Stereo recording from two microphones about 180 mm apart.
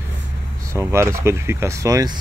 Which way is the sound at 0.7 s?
15° right (ahead or behind).